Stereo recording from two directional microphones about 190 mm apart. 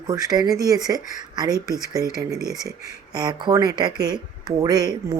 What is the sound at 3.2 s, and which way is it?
Speech, 20° right (ahead or behind).